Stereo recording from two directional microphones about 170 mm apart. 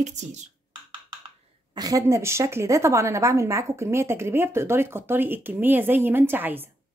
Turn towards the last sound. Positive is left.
turn(degrees=-10)  # may be behind; listen again after turning